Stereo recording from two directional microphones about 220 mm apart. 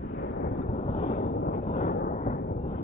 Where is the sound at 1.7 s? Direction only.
35° left (ahead or behind).